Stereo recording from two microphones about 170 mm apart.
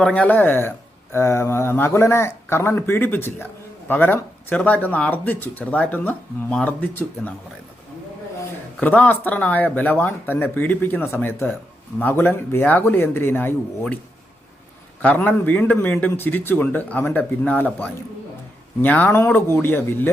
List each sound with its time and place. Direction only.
0.0 s speech: 5° left (ahead or behind)
8.8 s speech: 10° left (ahead or behind)
15.0 s speech: 10° left (ahead or behind)